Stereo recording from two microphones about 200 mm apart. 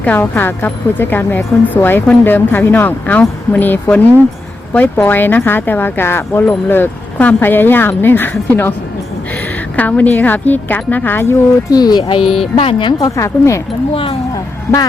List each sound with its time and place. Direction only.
0.0 s speech: 10° left (ahead or behind)
9.7 s speech: 10° left (ahead or behind)
12.2 s speech: centre (ahead or behind)
12.5 s speech: 25° left (ahead or behind)
13.9 s speech: 25° left (ahead or behind)